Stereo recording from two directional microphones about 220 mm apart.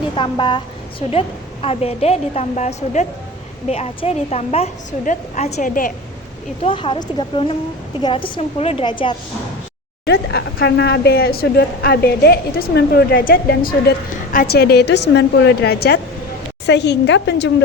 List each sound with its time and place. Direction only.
0.2 s a woman's voice: 20° left (ahead or behind); by 5.9 s 35° left (ahead or behind)
6.6 s a woman's voice: 25° left (ahead or behind)
10.1 s a woman's voice: 45° left (ahead or behind)